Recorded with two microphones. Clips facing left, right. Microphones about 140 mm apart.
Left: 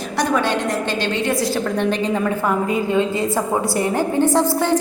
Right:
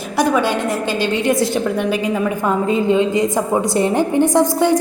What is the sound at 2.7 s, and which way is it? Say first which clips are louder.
A woman's voice: right 3 dB; 25° right (ahead or behind).